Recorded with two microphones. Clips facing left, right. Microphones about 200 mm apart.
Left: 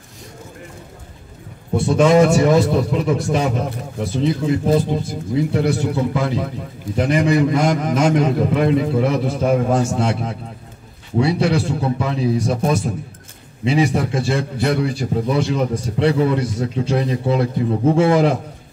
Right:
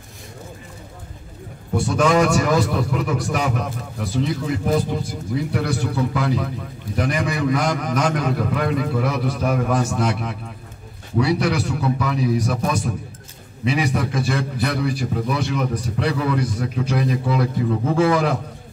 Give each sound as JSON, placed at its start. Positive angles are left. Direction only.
{"t": 1.8, "sound": "a man's voice", "side_deg": 25}